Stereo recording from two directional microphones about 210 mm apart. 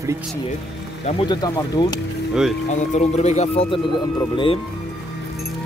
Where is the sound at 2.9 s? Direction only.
35° left (ahead or behind).